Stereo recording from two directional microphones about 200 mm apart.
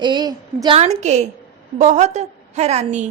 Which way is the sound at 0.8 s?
35° right (ahead or behind).